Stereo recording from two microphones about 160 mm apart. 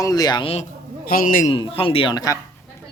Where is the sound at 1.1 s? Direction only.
60° left (ahead or behind).